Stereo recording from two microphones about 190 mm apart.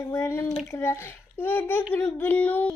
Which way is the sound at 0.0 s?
15° left (ahead or behind).